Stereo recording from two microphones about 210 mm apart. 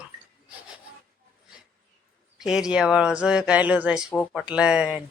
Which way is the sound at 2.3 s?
Centre (ahead or behind).